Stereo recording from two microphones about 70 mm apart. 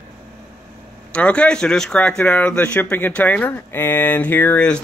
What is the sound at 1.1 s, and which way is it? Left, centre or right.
Speech, centre.